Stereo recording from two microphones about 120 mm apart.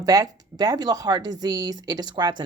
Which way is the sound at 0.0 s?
30° right (ahead or behind).